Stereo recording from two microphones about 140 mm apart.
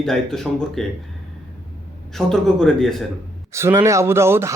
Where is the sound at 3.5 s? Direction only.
20° right (ahead or behind).